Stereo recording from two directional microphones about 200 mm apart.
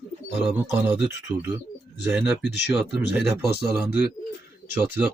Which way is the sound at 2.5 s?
60° left (ahead or behind).